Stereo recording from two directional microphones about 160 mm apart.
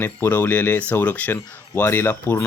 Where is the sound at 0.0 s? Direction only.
10° left (ahead or behind).